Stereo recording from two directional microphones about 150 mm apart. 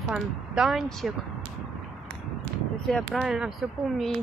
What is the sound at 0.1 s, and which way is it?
Speech, 5° right (ahead or behind).